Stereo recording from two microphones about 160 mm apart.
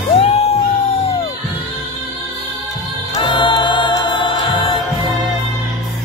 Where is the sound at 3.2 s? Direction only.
30° left (ahead or behind).